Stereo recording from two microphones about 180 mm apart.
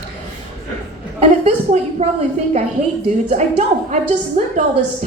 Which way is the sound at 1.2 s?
35° right (ahead or behind).